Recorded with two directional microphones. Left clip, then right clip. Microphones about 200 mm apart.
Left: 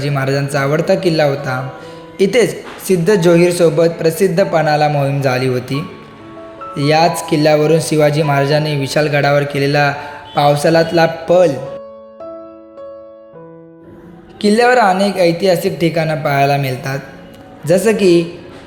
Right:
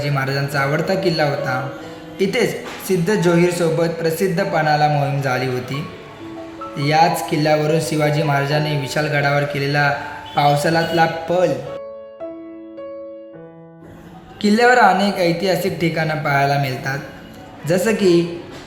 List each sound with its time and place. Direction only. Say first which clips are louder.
0.0 s a woman's voice: left 4 dB; 20° left (ahead or behind)
14.4 s speech: left 2 dB; 15° left (ahead or behind)